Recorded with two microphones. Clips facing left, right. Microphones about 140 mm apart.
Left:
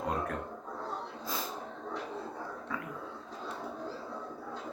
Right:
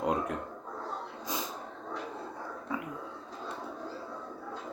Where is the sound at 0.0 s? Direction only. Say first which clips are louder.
Right 3 dB; 20° right (ahead or behind).